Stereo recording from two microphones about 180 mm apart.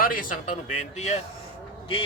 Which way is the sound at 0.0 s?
50° left (ahead or behind).